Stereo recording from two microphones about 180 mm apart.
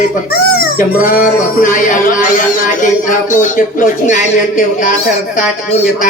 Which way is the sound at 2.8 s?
45° left (ahead or behind).